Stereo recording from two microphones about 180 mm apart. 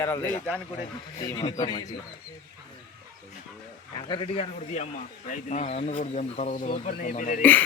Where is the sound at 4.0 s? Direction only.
30° left (ahead or behind); by 7.4 s 45° left (ahead or behind).